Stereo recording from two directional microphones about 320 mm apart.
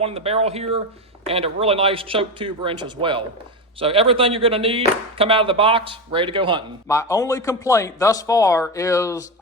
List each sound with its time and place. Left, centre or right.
0.0 s speech: centre
6.8 s a man's voice: centre